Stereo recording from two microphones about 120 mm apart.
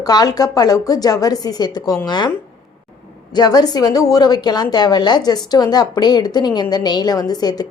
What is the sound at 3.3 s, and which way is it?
A woman's voice, 35° left (ahead or behind).